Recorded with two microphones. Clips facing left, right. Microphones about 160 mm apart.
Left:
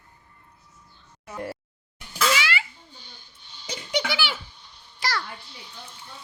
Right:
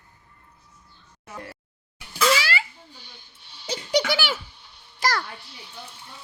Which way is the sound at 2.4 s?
35° right (ahead or behind).